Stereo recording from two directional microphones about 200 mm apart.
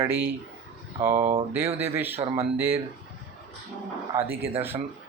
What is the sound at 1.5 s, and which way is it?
Speech, 10° right (ahead or behind).